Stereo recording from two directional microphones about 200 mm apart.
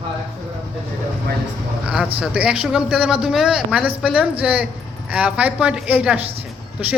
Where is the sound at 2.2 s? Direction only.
5° right (ahead or behind).